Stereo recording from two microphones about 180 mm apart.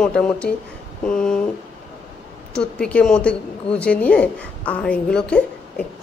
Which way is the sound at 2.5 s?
5° left (ahead or behind).